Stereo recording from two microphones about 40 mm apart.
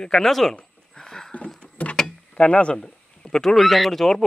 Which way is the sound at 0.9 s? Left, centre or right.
Centre.